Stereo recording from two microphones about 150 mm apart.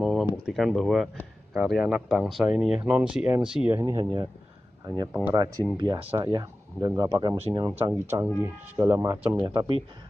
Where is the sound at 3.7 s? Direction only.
15° right (ahead or behind).